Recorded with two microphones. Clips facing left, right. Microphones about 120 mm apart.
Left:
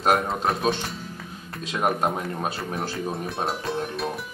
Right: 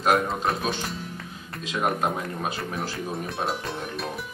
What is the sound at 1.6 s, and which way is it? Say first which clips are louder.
Speech: left 1 dB; 40° left (ahead or behind).